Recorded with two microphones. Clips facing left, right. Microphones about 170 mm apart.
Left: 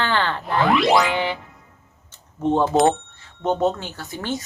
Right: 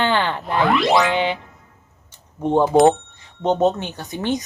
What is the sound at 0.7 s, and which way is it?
Ding, centre (ahead or behind).